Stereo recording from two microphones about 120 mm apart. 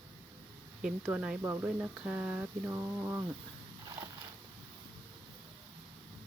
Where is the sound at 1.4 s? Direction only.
20° right (ahead or behind).